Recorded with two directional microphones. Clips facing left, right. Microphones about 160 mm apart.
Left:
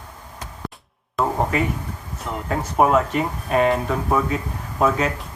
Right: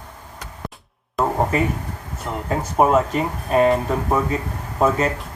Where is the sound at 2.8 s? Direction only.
Centre (ahead or behind).